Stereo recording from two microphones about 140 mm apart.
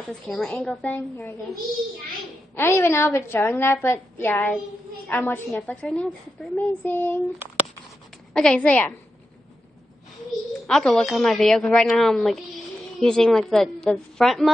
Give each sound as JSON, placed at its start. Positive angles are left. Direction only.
{"t": 0.1, "sound": "a woman's voice", "side_deg": 5}
{"t": 2.5, "sound": "a woman's voice", "side_deg": 15}
{"t": 8.3, "sound": "a woman's voice", "side_deg": 5}
{"t": 10.7, "sound": "a woman's voice", "side_deg": 5}